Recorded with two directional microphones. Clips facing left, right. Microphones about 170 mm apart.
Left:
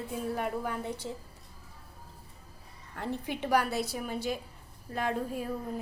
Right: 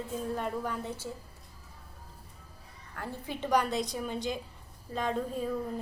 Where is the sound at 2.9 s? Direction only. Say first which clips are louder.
Left 4 dB; 20° left (ahead or behind).